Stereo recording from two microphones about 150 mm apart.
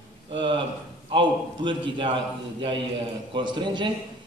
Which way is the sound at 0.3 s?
35° right (ahead or behind).